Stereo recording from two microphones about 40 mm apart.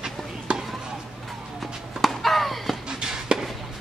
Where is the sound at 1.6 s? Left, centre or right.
Centre.